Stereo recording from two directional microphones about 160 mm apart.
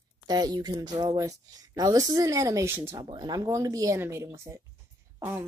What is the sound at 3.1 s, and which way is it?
Speech, 25° right (ahead or behind).